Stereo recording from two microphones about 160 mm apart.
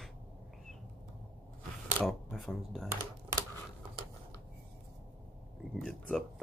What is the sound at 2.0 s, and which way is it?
Shuffling cards, centre (ahead or behind).